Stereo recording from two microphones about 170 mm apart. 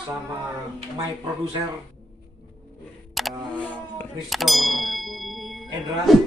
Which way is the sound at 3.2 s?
Centre (ahead or behind).